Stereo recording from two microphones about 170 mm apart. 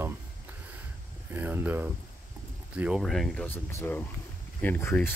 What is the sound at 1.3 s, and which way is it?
Speech, 10° right (ahead or behind).